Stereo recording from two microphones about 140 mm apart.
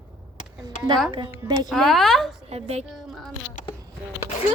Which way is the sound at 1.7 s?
Centre (ahead or behind).